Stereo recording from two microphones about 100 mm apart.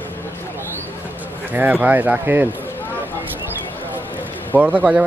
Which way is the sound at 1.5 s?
15° right (ahead or behind).